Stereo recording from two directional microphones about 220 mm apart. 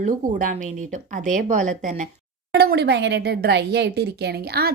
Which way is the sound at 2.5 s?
45° right (ahead or behind).